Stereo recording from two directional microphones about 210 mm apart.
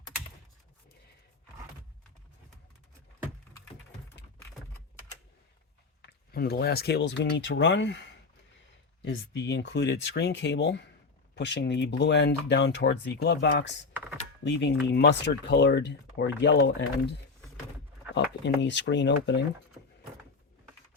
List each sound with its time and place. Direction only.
6.0 s speech: 50° left (ahead or behind)